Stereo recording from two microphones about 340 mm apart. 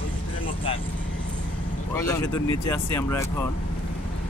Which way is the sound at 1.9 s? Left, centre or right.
Centre.